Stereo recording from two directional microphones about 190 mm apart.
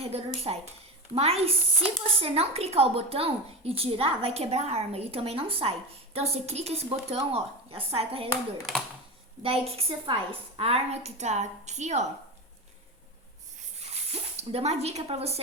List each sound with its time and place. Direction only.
0.0 s a woman's voice: 30° right (ahead or behind)
8.3 s speech: centre (ahead or behind)
9.4 s a woman's voice: 30° right (ahead or behind)
13.6 s a sound: 35° right (ahead or behind)